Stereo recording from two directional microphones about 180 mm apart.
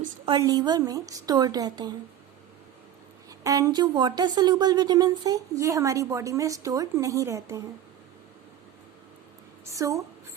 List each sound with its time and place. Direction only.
0.3 s a woman's voice: 20° right (ahead or behind)
3.2 s a woman's voice: 20° right (ahead or behind)
9.6 s a woman's voice: 15° right (ahead or behind)